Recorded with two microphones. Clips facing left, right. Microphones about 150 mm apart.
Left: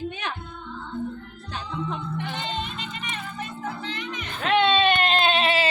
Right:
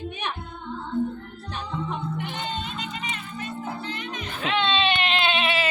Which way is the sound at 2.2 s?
90° left.